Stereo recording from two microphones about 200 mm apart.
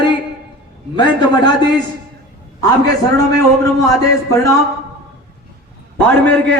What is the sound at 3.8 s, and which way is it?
Speech, 15° left (ahead or behind).